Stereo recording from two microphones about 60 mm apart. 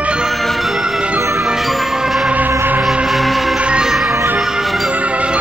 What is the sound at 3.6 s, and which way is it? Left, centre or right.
Music, centre.